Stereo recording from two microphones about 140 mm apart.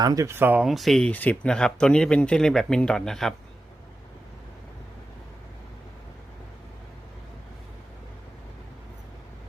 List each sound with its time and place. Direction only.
0.0 s speech: 25° right (ahead or behind); by 3.3 s 5° left (ahead or behind)